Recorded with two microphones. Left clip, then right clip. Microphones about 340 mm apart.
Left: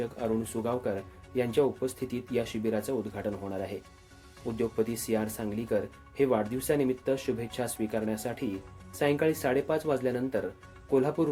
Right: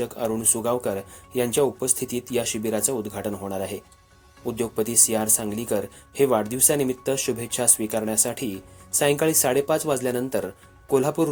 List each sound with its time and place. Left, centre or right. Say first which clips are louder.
0.0 s speech: right 6 dB; right